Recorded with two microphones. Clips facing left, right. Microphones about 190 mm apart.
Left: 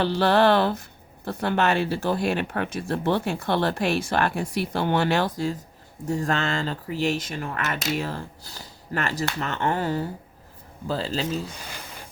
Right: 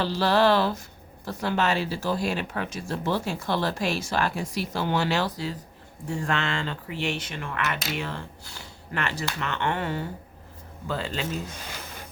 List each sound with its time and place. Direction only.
0.0 s speech: 55° left (ahead or behind); by 11.5 s 35° left (ahead or behind)